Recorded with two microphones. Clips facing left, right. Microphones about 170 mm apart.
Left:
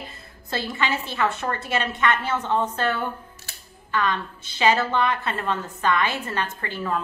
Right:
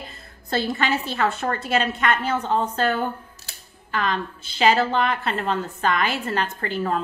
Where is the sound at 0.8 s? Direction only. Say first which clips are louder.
Right 2 dB; 40° right (ahead or behind).